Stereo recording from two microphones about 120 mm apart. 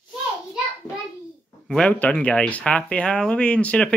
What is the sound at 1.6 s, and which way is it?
Speech, 10° left (ahead or behind).